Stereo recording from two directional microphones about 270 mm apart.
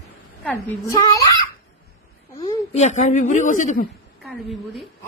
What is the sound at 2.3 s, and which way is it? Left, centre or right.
A woman's voice, centre.